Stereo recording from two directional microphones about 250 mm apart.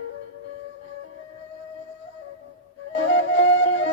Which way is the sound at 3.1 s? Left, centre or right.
Left.